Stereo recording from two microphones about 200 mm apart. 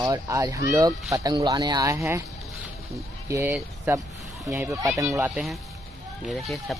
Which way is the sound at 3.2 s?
15° right (ahead or behind).